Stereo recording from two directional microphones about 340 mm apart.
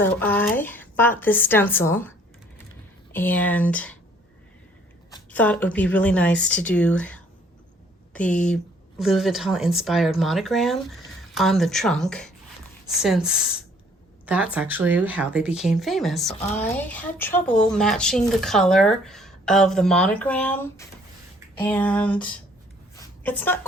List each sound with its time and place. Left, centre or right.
0.0 s speech: centre
5.1 s speech: centre
23.0 s a sound: centre